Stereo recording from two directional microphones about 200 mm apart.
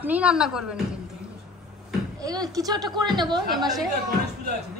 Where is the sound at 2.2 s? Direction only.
20° right (ahead or behind).